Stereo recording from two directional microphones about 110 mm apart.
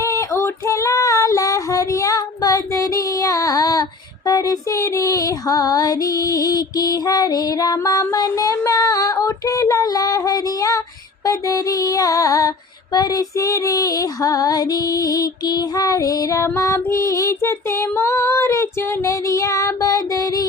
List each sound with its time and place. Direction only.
0.0 s female singing: 30° left (ahead or behind)